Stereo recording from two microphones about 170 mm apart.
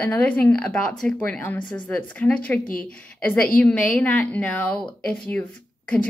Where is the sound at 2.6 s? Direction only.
55° left (ahead or behind).